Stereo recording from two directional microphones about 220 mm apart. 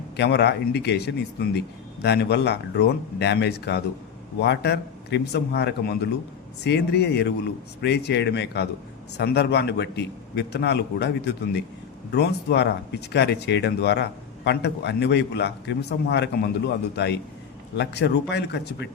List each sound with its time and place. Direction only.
0.2 s speech: 50° left (ahead or behind)